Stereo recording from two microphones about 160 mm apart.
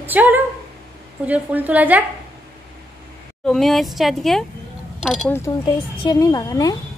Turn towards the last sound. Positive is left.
turn(degrees=25)  # may be behind; listen again after turning